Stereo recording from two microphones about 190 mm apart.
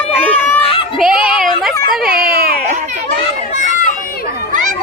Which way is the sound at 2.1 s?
50° right (ahead or behind).